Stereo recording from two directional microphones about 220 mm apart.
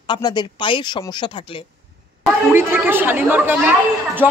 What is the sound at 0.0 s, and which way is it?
Speech, 20° left (ahead or behind).